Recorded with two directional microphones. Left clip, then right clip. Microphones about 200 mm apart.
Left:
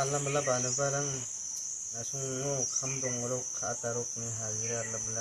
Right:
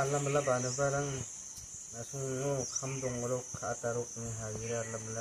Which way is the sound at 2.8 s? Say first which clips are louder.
Left 3 dB; 15° right (ahead or behind).